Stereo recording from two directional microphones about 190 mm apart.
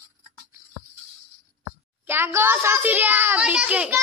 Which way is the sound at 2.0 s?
10° right (ahead or behind).